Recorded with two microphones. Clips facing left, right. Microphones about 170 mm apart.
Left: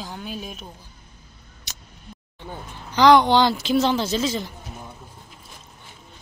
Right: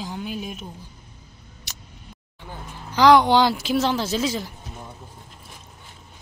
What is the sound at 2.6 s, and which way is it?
Speech, 5° right (ahead or behind).